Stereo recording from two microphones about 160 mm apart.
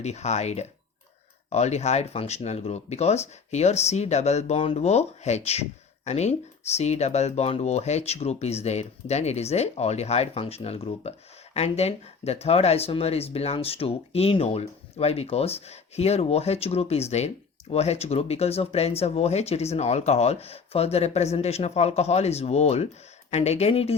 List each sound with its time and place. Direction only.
0.0 s speech: 45° left (ahead or behind)